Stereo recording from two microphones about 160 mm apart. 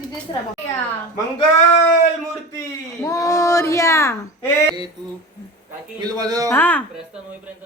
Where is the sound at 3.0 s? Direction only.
20° left (ahead or behind).